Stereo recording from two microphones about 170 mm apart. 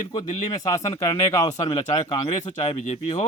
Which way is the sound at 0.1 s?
40° left (ahead or behind).